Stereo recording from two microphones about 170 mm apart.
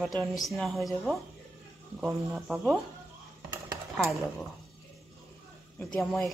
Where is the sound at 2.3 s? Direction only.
Centre (ahead or behind).